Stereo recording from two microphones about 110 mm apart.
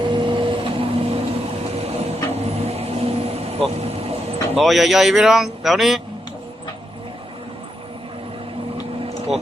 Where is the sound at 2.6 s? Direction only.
70° right (ahead or behind).